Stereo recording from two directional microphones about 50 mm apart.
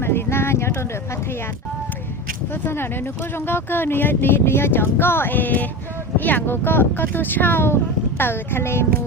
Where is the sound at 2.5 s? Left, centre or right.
Left.